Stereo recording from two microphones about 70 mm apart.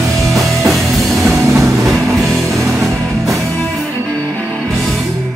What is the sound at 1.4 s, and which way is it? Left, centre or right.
Music, right.